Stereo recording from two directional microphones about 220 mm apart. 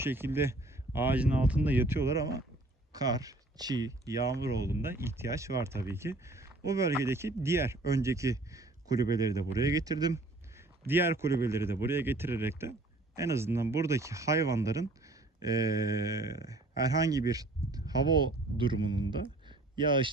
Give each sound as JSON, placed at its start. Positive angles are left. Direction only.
{"t": 0.0, "sound": "speech", "side_deg": -10}